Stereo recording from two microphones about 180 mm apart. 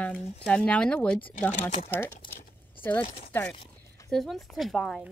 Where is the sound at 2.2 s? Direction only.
25° left (ahead or behind).